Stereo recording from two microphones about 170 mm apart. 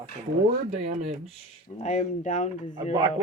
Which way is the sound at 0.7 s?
40° right (ahead or behind).